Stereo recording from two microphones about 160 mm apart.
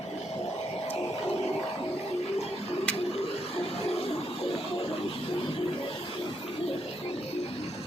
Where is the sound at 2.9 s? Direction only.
10° left (ahead or behind).